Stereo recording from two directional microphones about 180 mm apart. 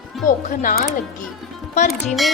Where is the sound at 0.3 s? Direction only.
45° left (ahead or behind).